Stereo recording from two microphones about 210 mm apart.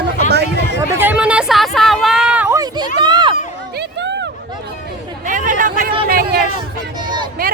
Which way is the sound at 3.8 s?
55° right (ahead or behind).